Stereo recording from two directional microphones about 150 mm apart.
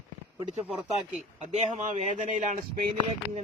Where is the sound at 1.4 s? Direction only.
50° right (ahead or behind).